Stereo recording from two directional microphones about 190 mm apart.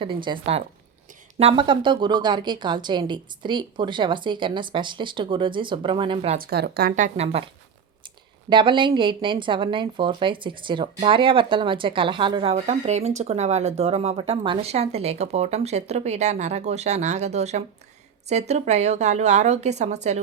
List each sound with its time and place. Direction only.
0.0 s speech: 25° right (ahead or behind)
6.4 s a woman's voice: 55° right (ahead or behind); by 20.2 s 35° right (ahead or behind)